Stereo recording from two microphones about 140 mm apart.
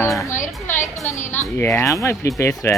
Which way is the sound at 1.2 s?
55° left (ahead or behind).